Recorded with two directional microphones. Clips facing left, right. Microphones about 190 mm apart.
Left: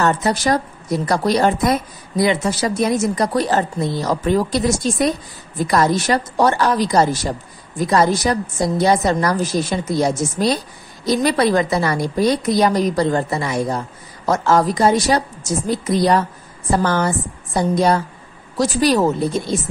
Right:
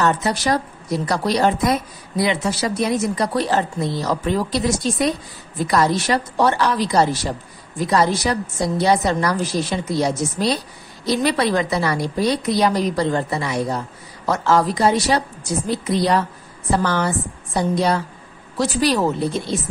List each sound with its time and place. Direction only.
0.0 s speech: 45° left (ahead or behind)